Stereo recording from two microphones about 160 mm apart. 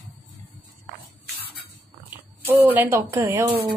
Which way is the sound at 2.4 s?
10° right (ahead or behind).